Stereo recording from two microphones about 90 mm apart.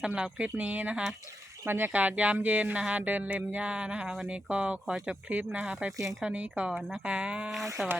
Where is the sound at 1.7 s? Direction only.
20° right (ahead or behind).